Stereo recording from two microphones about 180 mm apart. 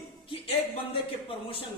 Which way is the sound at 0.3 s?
30° left (ahead or behind).